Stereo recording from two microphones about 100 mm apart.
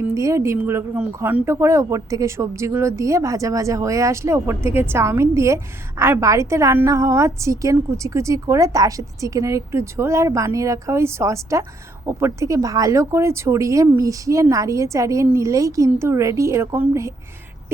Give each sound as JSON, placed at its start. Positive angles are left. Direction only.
{"t": 0.1, "sound": "a woman's voice", "side_deg": -30}